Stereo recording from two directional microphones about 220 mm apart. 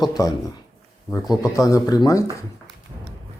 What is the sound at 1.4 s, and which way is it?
Speech, 15° left (ahead or behind).